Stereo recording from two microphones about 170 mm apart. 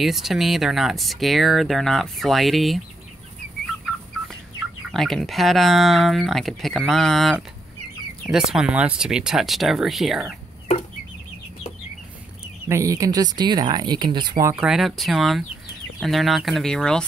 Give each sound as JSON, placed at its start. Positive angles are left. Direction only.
{"t": 0.0, "sound": "speech", "side_deg": 0}
{"t": 4.9, "sound": "speech", "side_deg": 0}
{"t": 12.6, "sound": "speech", "side_deg": -15}
{"t": 14.5, "sound": "speech", "side_deg": -5}